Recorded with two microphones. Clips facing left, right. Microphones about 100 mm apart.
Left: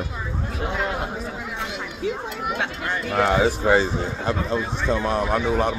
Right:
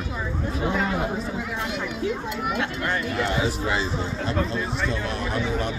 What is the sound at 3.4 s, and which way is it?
Speech, 45° left (ahead or behind).